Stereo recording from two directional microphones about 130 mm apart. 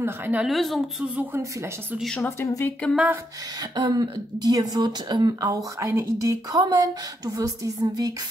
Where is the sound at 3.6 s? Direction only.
30° right (ahead or behind).